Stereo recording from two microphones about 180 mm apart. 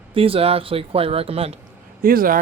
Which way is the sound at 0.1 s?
30° right (ahead or behind).